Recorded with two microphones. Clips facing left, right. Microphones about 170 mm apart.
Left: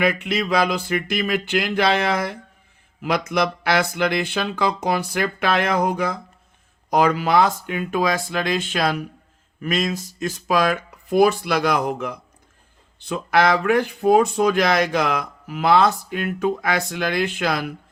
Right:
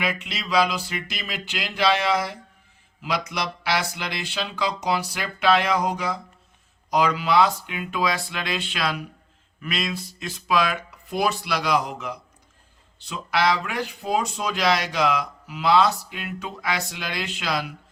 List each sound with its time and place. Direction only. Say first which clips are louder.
0.0 s speech: left 8 dB; 55° left (ahead or behind)